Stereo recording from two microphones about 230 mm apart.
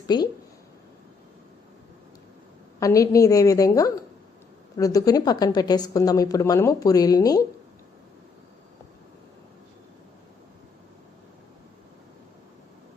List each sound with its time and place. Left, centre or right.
0.1 s speech: centre
2.8 s a woman's voice: centre